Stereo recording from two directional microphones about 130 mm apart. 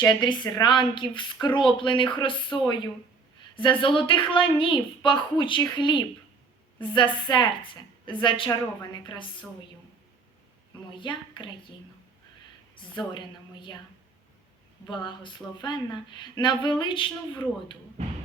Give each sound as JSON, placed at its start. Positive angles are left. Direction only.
{"t": 0.1, "sound": "a woman's voice", "side_deg": 35}
{"t": 10.9, "sound": "a woman's voice", "side_deg": 40}
{"t": 12.7, "sound": "a woman's voice", "side_deg": 35}
{"t": 14.8, "sound": "a woman's voice", "side_deg": 40}